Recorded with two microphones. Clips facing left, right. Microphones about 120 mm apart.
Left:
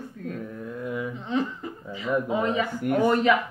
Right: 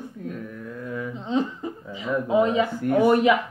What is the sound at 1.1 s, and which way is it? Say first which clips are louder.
Speech: right 6 dB; 20° right (ahead or behind).